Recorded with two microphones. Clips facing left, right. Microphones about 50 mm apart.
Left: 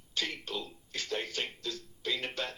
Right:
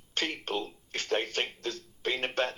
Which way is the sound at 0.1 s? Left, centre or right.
Right.